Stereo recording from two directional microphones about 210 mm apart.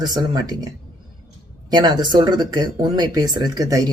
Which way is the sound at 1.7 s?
20° right (ahead or behind).